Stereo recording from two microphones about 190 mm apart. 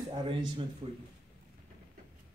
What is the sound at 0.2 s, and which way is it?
Speech, 25° right (ahead or behind).